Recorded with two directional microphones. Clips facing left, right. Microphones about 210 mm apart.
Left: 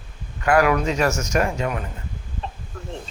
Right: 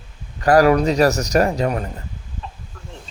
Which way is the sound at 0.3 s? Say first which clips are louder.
Right 5 dB; 35° right (ahead or behind).